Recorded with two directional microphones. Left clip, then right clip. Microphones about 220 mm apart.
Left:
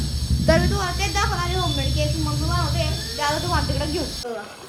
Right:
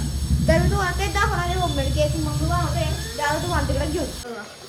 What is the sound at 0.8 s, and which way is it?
Speech, 5° left (ahead or behind).